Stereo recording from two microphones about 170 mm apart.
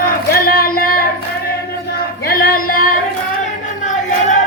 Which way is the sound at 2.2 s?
60° left (ahead or behind).